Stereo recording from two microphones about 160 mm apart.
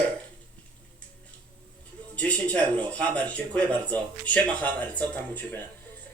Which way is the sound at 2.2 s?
10° left (ahead or behind).